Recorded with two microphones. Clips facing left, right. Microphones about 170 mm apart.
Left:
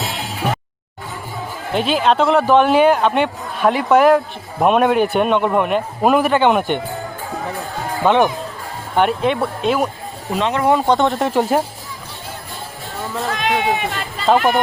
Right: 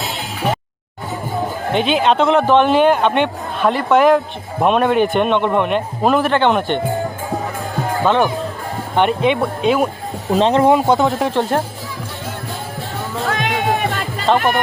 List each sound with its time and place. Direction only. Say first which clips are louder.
1.7 s a man's voice: right 1 dB; centre (ahead or behind)
8.0 s a man's voice: left 2 dB; 15° left (ahead or behind)
9.0 s speech: right 1 dB; centre (ahead or behind)
10.3 s speech: right 6 dB; 30° right (ahead or behind)
10.7 s speech: right 2 dB; 15° right (ahead or behind)
10.9 s speech: even; centre (ahead or behind)
13.2 s music: even; 50° right (ahead or behind)